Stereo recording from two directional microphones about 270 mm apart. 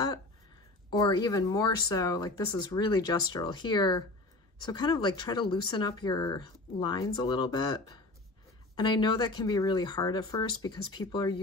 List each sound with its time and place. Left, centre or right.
0.8 s speech: centre